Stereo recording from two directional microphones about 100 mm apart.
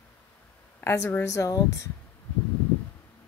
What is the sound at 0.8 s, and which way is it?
A woman's voice, 30° left (ahead or behind).